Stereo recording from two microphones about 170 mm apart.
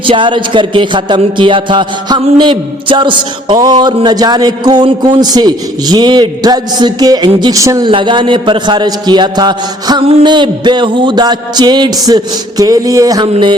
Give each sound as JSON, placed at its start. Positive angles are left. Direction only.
{"t": 0.0, "sound": "speech", "side_deg": -30}
{"t": 7.9, "sound": "speech", "side_deg": -30}